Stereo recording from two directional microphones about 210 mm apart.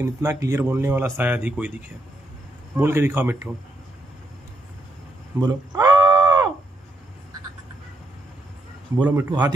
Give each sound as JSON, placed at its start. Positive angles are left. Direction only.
{"t": 0.0, "sound": "speech", "side_deg": -10}
{"t": 5.4, "sound": "a sound", "side_deg": -20}
{"t": 8.9, "sound": "a man's voice", "side_deg": -20}